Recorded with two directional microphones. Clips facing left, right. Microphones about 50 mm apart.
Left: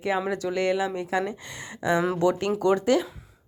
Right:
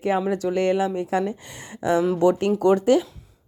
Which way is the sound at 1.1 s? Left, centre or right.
Left.